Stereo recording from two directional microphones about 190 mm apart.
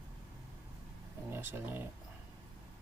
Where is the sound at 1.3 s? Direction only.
10° right (ahead or behind).